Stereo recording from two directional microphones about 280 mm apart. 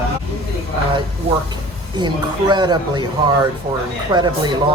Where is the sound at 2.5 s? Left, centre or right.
Centre.